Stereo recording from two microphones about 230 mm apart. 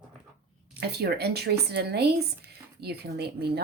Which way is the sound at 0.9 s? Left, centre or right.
Right.